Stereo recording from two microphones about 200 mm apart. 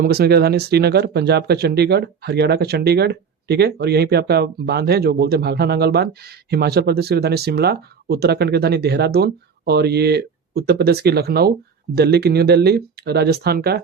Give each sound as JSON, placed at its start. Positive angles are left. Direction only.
{"t": 0.0, "sound": "speech", "side_deg": -50}